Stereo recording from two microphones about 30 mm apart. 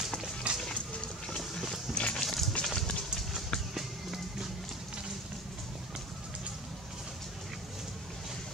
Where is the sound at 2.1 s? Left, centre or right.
Centre.